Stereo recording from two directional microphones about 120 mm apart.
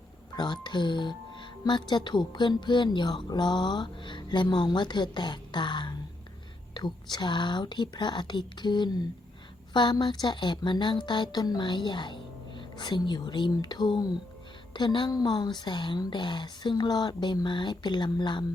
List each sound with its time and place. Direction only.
0.3 s speech: 40° left (ahead or behind)